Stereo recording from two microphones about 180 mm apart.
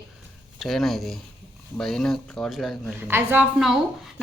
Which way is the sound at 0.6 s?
Centre (ahead or behind).